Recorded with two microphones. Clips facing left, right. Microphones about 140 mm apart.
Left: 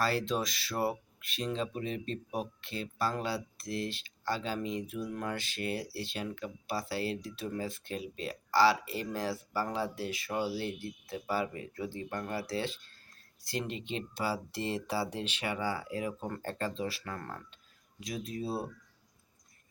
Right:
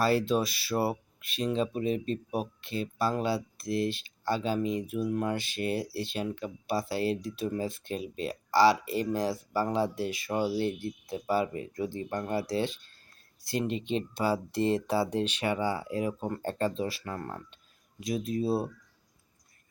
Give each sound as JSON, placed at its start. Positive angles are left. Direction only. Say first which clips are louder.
{"t": 0.0, "sound": "speech", "louder": "right 5 dB", "side_deg": -15}